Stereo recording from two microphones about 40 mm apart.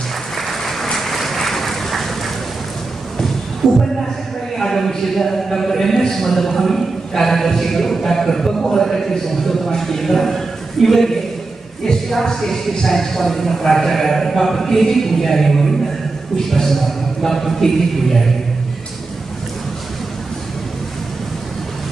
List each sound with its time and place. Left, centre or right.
0.4 s applause: centre
0.8 s vehicle: centre
3.6 s a man's voice: centre
4.6 s a sound: centre
11.8 s a man's voice: centre